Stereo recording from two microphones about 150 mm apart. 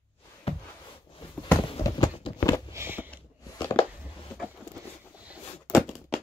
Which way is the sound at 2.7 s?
15° right (ahead or behind).